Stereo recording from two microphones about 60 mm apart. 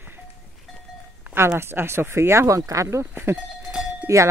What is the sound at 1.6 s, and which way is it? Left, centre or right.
Wind chime, right.